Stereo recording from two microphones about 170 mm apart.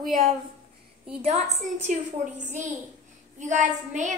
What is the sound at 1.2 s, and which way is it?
A woman's voice, 40° right (ahead or behind).